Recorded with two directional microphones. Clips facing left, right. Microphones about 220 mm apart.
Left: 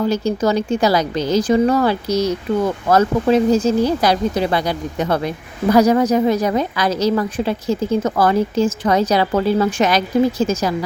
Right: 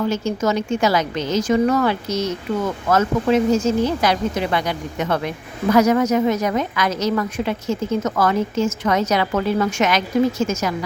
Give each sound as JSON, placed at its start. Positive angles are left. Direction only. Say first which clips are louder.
{"t": 0.1, "sound": "a woman's voice", "louder": "left 3 dB", "side_deg": 35}